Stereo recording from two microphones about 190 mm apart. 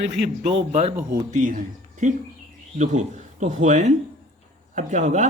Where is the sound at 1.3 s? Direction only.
40° right (ahead or behind).